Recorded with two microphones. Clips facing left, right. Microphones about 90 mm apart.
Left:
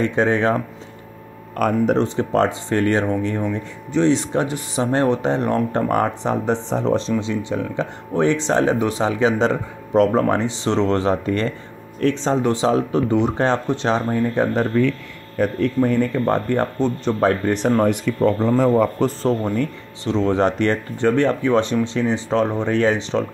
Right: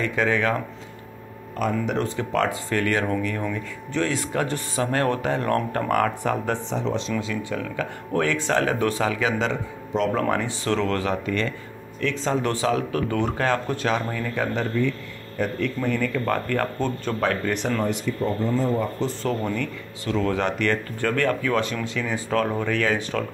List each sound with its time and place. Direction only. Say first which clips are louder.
0.0 s speech: left 5 dB; 30° left (ahead or behind)
1.6 s speech: left 5 dB; 55° left (ahead or behind)
2.0 s speech: left 6 dB; 30° left (ahead or behind)
6.7 s speech: left 6 dB; 40° left (ahead or behind)
10.1 s speech: left 5 dB; 25° left (ahead or behind)
14.7 s speech: left 5 dB; 60° left (ahead or behind)
15.4 s speech: left 7 dB; 40° left (ahead or behind); by 17.1 s 25° left (ahead or behind)
17.2 s speech: left 6 dB; 35° left (ahead or behind)
17.8 s speech: left 7 dB; 70° left (ahead or behind)
19.2 s speech: left 5 dB; 35° left (ahead or behind)